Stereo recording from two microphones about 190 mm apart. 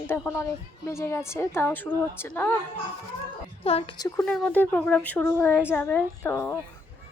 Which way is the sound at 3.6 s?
30° left (ahead or behind).